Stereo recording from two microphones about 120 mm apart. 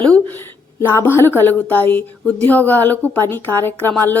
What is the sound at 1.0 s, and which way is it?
Speech, 20° left (ahead or behind).